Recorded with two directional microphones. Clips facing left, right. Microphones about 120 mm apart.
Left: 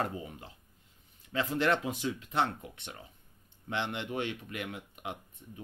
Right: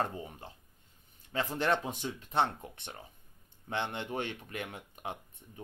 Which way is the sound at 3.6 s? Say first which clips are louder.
Left 1 dB; 40° right (ahead or behind).